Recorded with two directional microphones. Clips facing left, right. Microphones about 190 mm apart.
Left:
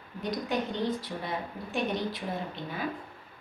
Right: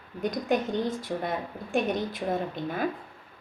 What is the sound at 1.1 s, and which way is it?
A woman's voice, 50° right (ahead or behind).